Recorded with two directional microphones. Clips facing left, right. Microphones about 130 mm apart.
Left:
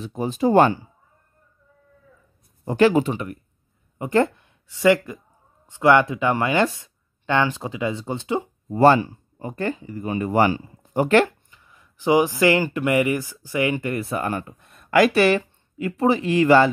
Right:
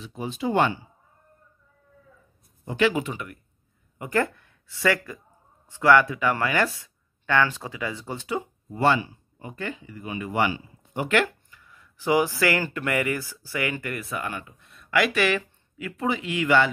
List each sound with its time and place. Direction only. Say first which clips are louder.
0.0 s speech: left 7 dB; 40° left (ahead or behind)
2.6 s speech: left 6 dB; 40° left (ahead or behind); by 8.5 s 20° left (ahead or behind)
8.6 s speech: left 7 dB; 40° left (ahead or behind)
11.2 s speech: even; 20° left (ahead or behind); by 16.6 s 40° left (ahead or behind)